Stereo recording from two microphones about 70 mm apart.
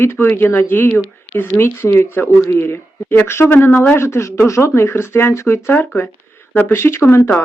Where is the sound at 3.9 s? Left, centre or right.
Left.